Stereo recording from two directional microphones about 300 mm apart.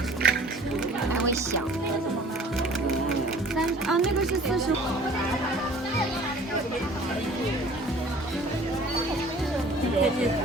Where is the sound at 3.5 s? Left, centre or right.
Centre.